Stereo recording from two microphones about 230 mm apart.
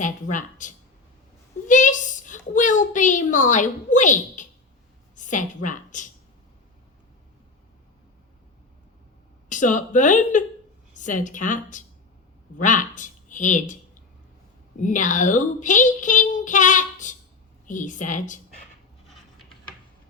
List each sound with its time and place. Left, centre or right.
0.0 s a child's voice: left
9.5 s speech: left
14.8 s speech: left
19.0 s a sound: centre